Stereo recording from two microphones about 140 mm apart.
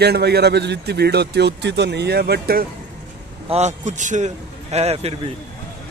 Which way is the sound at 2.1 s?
90° right.